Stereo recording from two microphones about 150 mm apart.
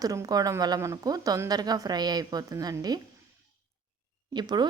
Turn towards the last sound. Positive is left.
turn(degrees=-30)  # may be behind; listen again after turning